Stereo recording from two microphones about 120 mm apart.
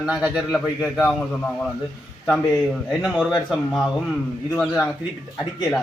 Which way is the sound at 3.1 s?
5° right (ahead or behind).